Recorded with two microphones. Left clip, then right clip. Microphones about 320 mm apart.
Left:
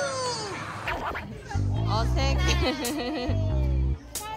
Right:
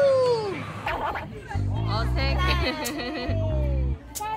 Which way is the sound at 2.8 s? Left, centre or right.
Centre.